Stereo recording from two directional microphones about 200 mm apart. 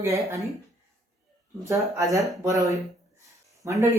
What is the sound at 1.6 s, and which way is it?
A woman's voice, 15° right (ahead or behind).